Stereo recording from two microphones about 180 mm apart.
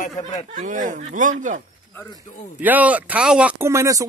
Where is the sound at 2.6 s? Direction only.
10° right (ahead or behind).